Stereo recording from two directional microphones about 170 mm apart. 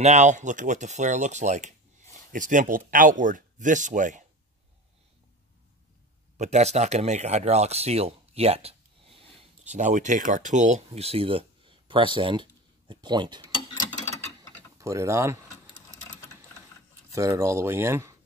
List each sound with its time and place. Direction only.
0.0 s speech: 45° right (ahead or behind)
6.3 s speech: 40° right (ahead or behind); by 13.5 s 25° right (ahead or behind)
14.8 s speech: 20° right (ahead or behind)
17.1 s speech: 15° right (ahead or behind)